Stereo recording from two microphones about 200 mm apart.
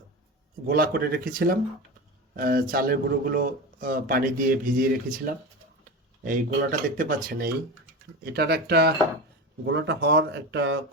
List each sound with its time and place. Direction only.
0.7 s speech: 50° right (ahead or behind)